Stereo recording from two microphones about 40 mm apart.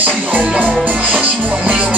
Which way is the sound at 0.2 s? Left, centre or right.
Right.